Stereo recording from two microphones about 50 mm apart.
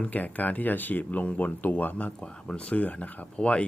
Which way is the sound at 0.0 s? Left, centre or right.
Left.